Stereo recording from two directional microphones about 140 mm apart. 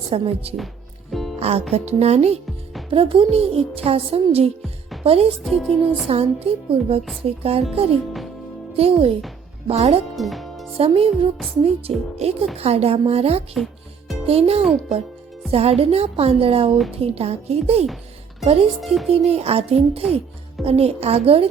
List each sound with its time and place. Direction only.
0.1 s a woman's voice: 45° right (ahead or behind)
5.4 s speech: centre (ahead or behind)
6.1 s a woman's voice: 45° right (ahead or behind)
8.7 s a woman's voice: 45° right (ahead or behind)
10.2 s music: centre (ahead or behind)
10.8 s a woman's voice: 40° right (ahead or behind)
18.8 s speech: centre (ahead or behind)
19.1 s a woman's voice: 45° right (ahead or behind)